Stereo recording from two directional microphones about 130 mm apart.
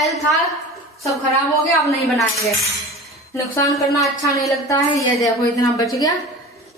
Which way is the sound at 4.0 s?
25° left (ahead or behind).